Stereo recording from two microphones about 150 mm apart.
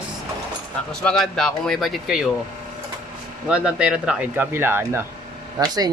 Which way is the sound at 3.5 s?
5° right (ahead or behind).